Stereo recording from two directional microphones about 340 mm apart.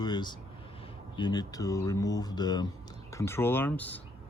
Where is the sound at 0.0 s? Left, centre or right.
Centre.